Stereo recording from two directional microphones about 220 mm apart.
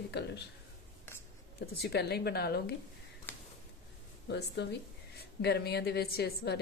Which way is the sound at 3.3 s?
10° left (ahead or behind).